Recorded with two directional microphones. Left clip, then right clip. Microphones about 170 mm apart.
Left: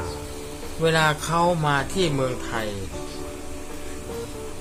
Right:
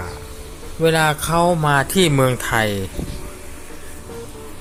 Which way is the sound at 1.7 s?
45° right (ahead or behind).